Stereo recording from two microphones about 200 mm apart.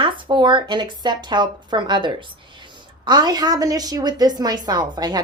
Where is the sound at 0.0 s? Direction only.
25° right (ahead or behind).